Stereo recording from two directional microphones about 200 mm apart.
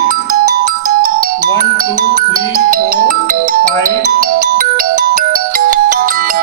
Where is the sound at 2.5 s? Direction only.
45° right (ahead or behind).